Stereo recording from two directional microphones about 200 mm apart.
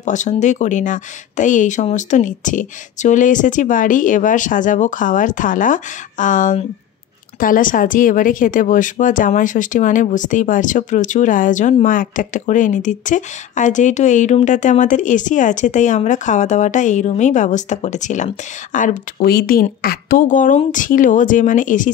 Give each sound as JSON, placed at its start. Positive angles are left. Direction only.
{"t": 0.0, "sound": "speech", "side_deg": 35}